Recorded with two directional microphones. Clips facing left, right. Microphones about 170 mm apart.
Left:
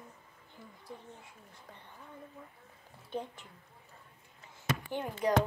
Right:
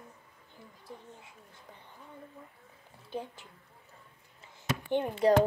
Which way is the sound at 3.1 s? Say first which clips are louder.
Even; 5° right (ahead or behind).